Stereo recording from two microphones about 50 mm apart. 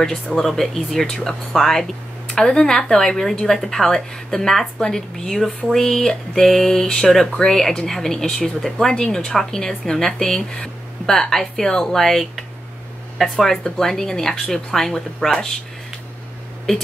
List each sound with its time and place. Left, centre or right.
0.0 s speech: centre
1.0 s speech: centre